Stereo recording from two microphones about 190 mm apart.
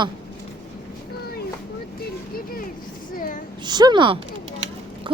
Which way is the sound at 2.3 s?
50° left (ahead or behind).